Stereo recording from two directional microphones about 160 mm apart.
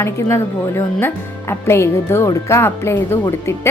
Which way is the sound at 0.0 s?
15° left (ahead or behind).